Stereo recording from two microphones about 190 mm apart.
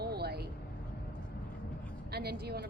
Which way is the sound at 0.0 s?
55° right (ahead or behind).